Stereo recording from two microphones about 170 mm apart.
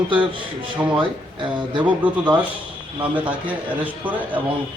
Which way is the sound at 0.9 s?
30° right (ahead or behind).